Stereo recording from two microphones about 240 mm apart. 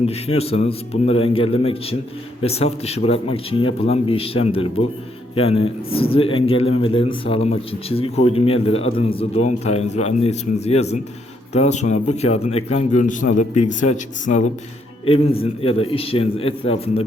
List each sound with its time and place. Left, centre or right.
0.0 s a man's voice: left